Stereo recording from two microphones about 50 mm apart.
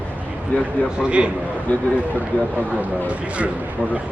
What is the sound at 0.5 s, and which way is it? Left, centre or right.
Speech, left.